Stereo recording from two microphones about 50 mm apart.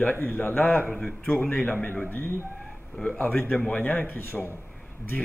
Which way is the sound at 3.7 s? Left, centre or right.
Left.